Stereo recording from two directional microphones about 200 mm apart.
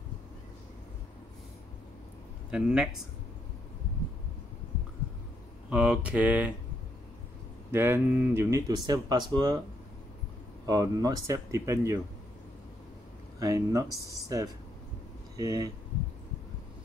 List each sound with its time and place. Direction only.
2.5 s speech: 5° right (ahead or behind)
5.7 s speech: 5° right (ahead or behind)
7.7 s speech: 10° right (ahead or behind)
10.7 s speech: 20° right (ahead or behind)
13.4 s speech: 15° right (ahead or behind)